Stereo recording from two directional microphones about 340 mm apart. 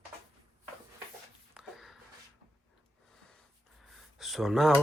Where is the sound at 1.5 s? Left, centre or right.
Centre.